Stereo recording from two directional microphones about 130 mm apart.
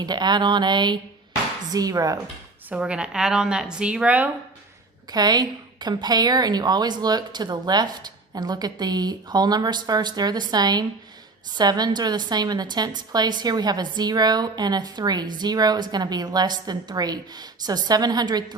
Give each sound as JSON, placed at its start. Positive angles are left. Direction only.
{"t": 0.0, "sound": "a woman's voice", "side_deg": -35}
{"t": 2.6, "sound": "speech", "side_deg": -10}
{"t": 5.1, "sound": "a woman's voice", "side_deg": -30}